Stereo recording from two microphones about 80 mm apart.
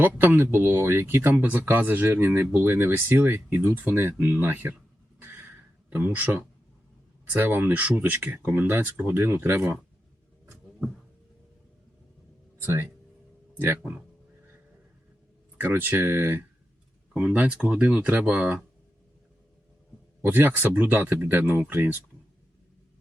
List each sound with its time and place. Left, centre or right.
0.0 s speech: right
5.9 s speech: right
12.6 s speech: right
15.6 s speech: right
17.2 s speech: centre
20.2 s speech: right